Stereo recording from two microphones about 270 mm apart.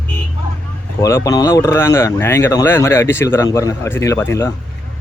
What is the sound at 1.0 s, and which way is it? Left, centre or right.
Speech, centre.